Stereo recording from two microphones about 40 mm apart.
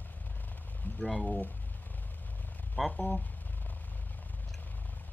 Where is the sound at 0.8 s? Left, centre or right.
Left.